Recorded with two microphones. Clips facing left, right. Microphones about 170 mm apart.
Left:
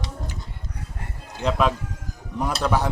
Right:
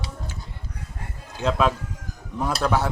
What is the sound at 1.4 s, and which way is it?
Speech, 10° left (ahead or behind).